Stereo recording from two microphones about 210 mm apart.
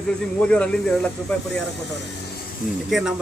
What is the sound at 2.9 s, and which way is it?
Speech, centre (ahead or behind).